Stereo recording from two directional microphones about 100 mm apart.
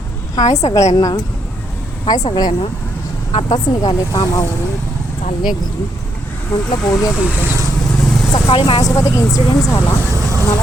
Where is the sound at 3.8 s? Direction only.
40° left (ahead or behind).